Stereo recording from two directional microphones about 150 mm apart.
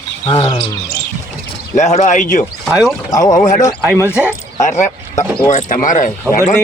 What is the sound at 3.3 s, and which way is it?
Speech, 55° left (ahead or behind).